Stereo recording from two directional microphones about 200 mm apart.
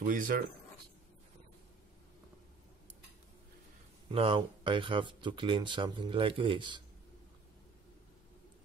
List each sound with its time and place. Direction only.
0.0 s speech: 45° right (ahead or behind)
4.1 s speech: 25° right (ahead or behind)